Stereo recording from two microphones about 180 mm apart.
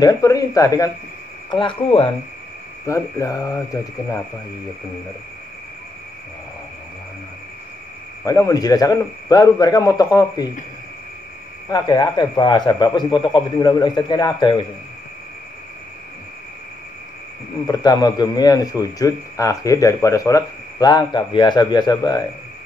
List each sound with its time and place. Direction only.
0.0 s a man's voice: 20° left (ahead or behind)
2.9 s speech: 15° left (ahead or behind)
8.3 s a man's voice: 20° left (ahead or behind)
11.7 s a man's voice: 20° left (ahead or behind)
17.6 s a man's voice: 20° left (ahead or behind)